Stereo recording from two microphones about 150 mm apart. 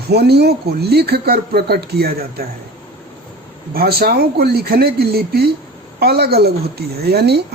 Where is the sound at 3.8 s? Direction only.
90° right.